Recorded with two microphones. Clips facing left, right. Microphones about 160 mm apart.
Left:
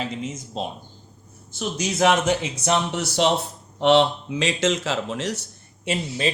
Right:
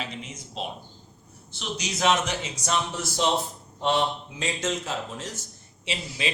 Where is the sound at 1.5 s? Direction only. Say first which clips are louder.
Left 6 dB; 50° left (ahead or behind); by 5.5 s 75° left (ahead or behind).